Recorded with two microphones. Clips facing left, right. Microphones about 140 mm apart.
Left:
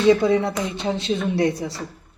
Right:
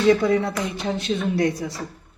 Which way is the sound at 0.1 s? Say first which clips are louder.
Left 2 dB; 25° left (ahead or behind).